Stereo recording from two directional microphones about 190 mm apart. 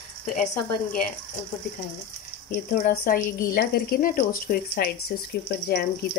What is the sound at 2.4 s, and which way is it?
A woman's voice, 50° left (ahead or behind).